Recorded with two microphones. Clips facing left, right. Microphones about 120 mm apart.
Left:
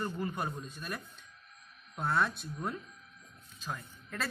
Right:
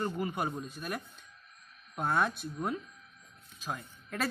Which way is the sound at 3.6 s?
15° right (ahead or behind).